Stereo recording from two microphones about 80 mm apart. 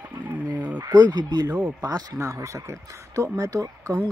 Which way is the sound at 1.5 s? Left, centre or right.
Right.